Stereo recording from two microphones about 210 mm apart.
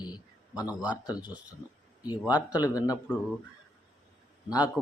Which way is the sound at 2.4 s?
15° left (ahead or behind).